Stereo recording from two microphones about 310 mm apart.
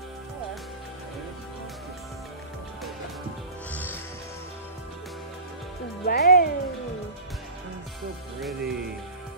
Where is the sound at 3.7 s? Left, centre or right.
Centre.